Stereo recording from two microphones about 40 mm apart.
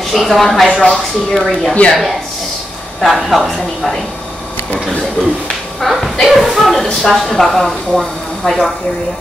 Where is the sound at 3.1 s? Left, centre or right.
Centre.